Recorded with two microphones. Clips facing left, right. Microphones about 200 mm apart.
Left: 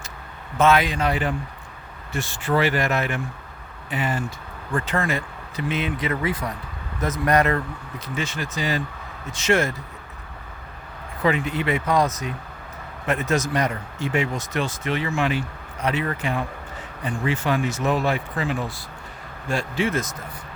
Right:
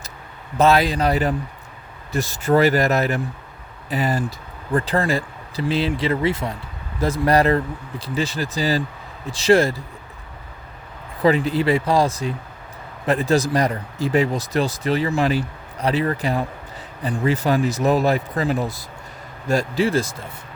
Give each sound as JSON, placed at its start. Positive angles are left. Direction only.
{"t": 0.5, "sound": "speech", "side_deg": -35}
{"t": 11.2, "sound": "speech", "side_deg": -35}